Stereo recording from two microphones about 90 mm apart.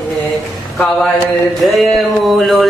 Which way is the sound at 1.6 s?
Centre (ahead or behind).